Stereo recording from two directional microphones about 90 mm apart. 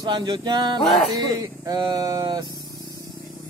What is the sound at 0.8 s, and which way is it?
Music, centre (ahead or behind).